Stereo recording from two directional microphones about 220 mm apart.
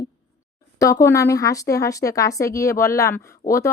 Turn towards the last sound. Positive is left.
turn(degrees=10)  # may be behind; listen again after turning